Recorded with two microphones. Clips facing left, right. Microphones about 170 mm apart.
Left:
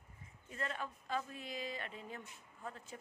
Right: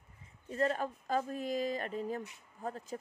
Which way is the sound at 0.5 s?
40° right (ahead or behind).